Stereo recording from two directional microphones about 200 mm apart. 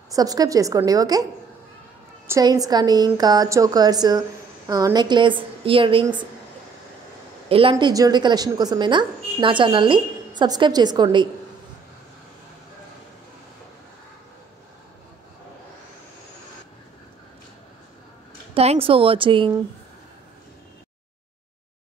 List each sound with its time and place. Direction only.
0.1 s a woman's voice: 20° right (ahead or behind)
2.2 s a woman's voice: 15° right (ahead or behind)
7.4 s speech: 25° right (ahead or behind)
7.7 s a woman's voice: 15° right (ahead or behind)
18.5 s a woman's voice: 30° right (ahead or behind)